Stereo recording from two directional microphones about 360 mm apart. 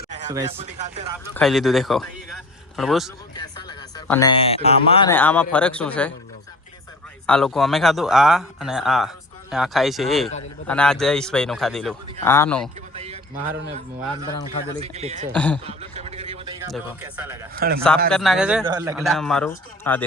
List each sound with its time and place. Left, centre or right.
0.1 s speech: centre
1.3 s a man's voice: centre
3.3 s speech: centre
7.3 s speech: centre
12.9 s a sound: centre
14.8 s a man's voice: centre
15.4 s speech: centre
15.6 s a sound: centre
16.7 s speech: centre
17.5 s a man's voice: right
17.7 s speech: centre